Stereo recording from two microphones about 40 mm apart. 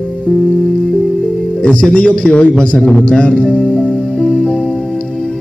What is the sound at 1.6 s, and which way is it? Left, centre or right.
Speech, left.